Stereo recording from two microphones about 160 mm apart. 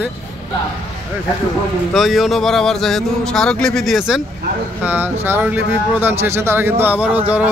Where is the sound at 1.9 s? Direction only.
Centre (ahead or behind).